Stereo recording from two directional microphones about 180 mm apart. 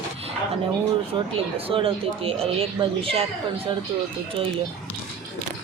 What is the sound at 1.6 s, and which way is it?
Speech, 30° right (ahead or behind).